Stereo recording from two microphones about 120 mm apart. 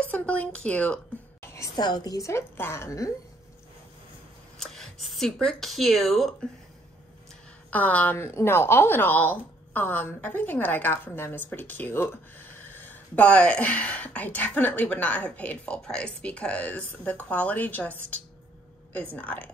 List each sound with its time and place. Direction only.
0.0 s speech: 10° left (ahead or behind)
1.5 s a woman's voice: 30° left (ahead or behind)
4.6 s speech: 5° left (ahead or behind)
7.7 s speech: 15° left (ahead or behind)
19.1 s speech: 15° left (ahead or behind)